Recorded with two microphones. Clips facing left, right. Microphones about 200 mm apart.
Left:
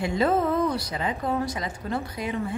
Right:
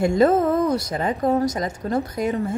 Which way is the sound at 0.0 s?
45° right (ahead or behind).